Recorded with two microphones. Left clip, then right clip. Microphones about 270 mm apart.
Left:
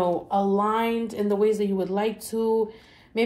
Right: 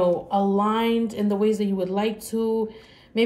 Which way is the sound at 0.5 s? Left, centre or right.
Left.